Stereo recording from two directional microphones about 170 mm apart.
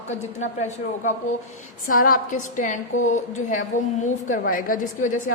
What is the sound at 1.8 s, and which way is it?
A woman's voice, 55° left (ahead or behind).